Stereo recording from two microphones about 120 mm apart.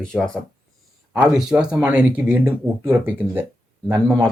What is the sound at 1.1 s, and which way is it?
Speech, 10° right (ahead or behind).